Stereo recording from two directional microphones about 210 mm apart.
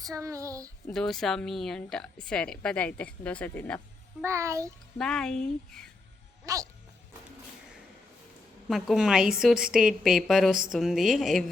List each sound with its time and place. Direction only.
0.0 s speech: 15° right (ahead or behind)
0.9 s speech: centre (ahead or behind)
4.2 s speech: 15° right (ahead or behind)
4.9 s speech: 5° left (ahead or behind)
6.4 s speech: 15° right (ahead or behind)
8.7 s speech: centre (ahead or behind)